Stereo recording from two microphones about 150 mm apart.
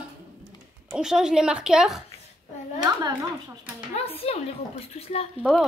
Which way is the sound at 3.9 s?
45° left (ahead or behind).